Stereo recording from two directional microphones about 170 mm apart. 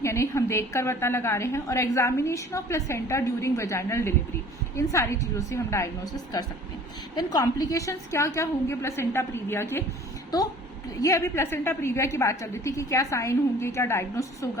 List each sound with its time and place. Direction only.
0.0 s a woman's voice: 15° left (ahead or behind)
11.0 s a woman's voice: 15° left (ahead or behind)